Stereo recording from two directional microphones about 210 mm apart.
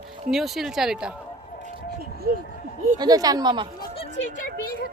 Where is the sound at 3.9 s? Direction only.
25° left (ahead or behind).